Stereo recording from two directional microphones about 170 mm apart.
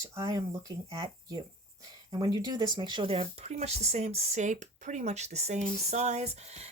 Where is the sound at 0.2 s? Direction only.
20° right (ahead or behind).